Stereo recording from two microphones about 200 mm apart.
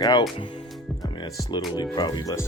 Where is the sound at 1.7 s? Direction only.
20° left (ahead or behind).